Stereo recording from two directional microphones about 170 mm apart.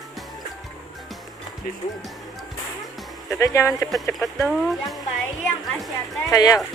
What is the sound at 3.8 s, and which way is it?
Speech, centre (ahead or behind).